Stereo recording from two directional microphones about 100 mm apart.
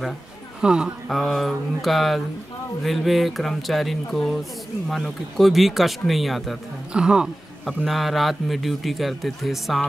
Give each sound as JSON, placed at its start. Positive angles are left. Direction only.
{"t": 0.6, "sound": "speech", "side_deg": -10}